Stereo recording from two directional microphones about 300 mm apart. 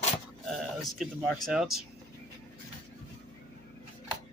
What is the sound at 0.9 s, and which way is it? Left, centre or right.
Speech, centre.